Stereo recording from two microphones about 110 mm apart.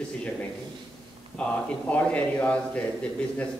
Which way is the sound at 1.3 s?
10° left (ahead or behind).